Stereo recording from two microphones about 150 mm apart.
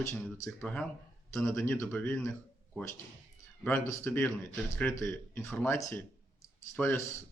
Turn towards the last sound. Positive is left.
turn(degrees=15)  # may be behind; listen again after turning